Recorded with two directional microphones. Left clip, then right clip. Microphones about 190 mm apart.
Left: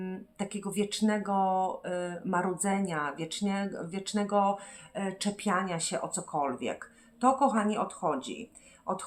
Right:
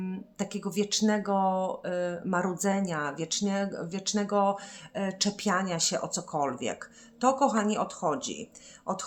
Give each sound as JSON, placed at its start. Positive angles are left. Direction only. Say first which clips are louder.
{"t": 0.0, "sound": "speech", "louder": "right 1 dB", "side_deg": -30}